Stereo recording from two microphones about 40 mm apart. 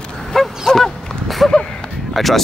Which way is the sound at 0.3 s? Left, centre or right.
Centre.